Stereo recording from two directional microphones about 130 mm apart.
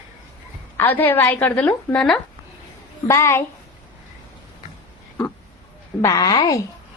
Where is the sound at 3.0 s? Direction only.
20° left (ahead or behind).